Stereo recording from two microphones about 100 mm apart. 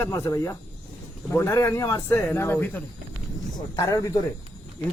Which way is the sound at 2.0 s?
20° left (ahead or behind).